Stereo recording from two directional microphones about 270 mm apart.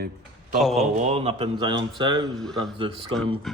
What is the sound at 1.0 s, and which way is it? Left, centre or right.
Speech, right.